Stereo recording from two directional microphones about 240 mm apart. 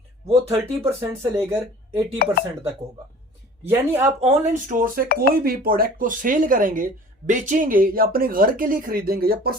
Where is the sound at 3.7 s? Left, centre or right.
Centre.